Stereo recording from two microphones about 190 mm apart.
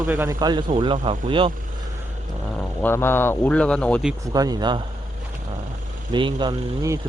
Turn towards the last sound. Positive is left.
turn(degrees=-25)  # may be behind; listen again after turning